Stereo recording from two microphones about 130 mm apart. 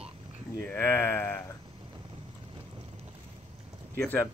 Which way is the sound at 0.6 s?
15° left (ahead or behind).